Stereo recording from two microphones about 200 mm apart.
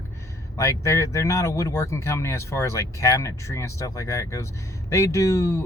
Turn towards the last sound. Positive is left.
turn(degrees=15)  # may be behind; listen again after turning